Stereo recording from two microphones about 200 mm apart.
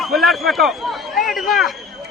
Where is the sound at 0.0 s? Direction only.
Centre (ahead or behind).